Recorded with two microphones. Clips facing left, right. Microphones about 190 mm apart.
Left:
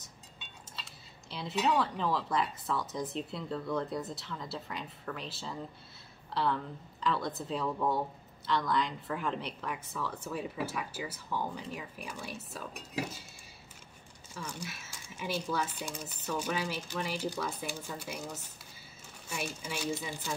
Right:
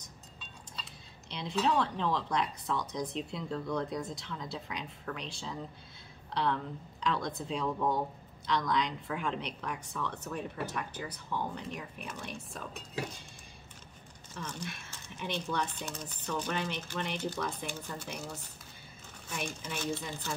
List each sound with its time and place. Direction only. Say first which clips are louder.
1.3 s a woman's voice: even; 5° left (ahead or behind)
14.3 s speech: right 1 dB; 10° left (ahead or behind)